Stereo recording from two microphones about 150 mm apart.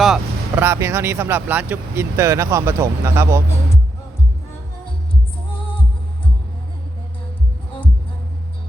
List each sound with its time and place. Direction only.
0.0 s vehicle: centre (ahead or behind)
0.6 s speech: 20° right (ahead or behind)